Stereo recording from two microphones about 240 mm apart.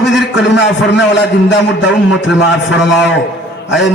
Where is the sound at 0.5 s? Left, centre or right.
Left.